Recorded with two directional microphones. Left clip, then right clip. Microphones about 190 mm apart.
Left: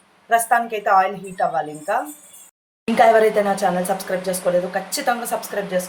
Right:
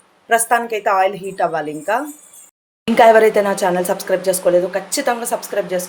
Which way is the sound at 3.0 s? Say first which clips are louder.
Right 4 dB; 40° right (ahead or behind).